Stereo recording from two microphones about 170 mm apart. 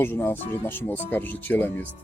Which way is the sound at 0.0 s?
15° left (ahead or behind).